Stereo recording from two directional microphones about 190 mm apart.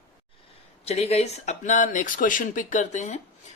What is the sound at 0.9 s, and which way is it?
Speech, 30° left (ahead or behind).